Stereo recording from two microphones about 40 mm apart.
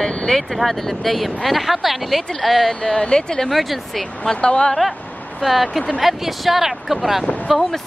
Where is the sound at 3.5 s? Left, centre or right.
Centre.